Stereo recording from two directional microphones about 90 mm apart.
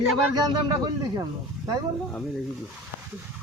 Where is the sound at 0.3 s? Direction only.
50° right (ahead or behind).